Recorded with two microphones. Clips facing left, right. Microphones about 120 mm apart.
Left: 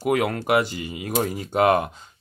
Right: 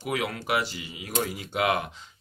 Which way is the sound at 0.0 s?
50° left (ahead or behind).